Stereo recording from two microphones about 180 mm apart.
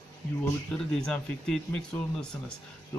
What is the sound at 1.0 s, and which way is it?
Speech, 5° left (ahead or behind).